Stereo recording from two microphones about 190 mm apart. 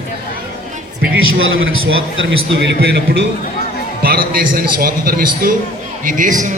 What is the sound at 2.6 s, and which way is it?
Speech, 60° right (ahead or behind).